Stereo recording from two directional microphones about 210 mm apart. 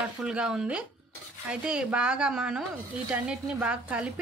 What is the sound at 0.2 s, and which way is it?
A woman's voice, 5° right (ahead or behind).